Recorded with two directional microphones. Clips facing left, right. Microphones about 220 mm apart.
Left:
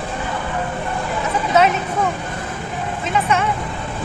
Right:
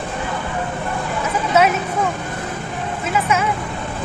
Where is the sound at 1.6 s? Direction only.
5° right (ahead or behind).